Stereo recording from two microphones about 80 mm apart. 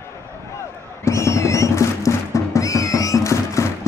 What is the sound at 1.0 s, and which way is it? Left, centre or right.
Music, left.